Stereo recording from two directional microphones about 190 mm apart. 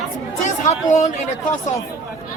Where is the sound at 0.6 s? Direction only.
40° left (ahead or behind).